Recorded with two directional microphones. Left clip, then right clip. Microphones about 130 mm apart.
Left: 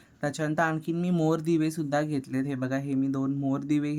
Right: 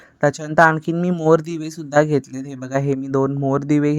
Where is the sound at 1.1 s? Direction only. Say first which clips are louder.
Right 10 dB; 45° right (ahead or behind); by 2.2 s 60° right (ahead or behind).